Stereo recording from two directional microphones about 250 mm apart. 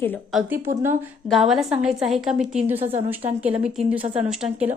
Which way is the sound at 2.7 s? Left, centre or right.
Right.